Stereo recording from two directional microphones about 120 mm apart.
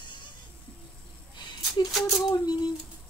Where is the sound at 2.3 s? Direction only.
35° left (ahead or behind).